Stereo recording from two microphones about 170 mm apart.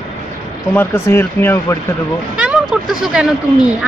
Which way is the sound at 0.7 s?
15° left (ahead or behind).